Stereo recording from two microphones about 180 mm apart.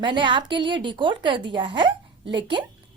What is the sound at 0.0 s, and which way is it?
Speech, 25° right (ahead or behind).